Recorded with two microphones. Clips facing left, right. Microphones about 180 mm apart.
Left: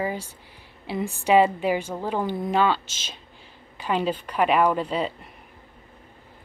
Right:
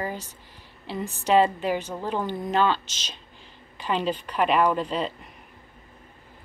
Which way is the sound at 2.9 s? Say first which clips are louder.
Even; 50° left (ahead or behind).